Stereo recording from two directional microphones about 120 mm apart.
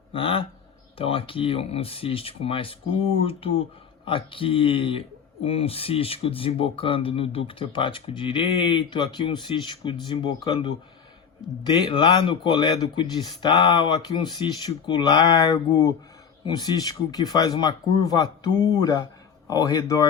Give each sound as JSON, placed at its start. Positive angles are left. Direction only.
{"t": 0.1, "sound": "speech", "side_deg": 50}